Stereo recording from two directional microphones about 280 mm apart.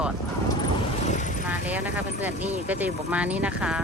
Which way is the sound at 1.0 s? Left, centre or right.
Left.